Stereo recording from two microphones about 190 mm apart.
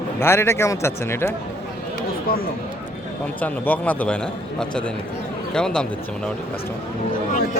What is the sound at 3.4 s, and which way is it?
Speech, 10° left (ahead or behind).